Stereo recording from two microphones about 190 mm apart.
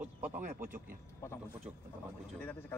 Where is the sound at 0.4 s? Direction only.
45° right (ahead or behind).